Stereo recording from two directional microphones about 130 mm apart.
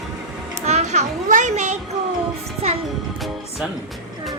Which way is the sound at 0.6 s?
55° right (ahead or behind).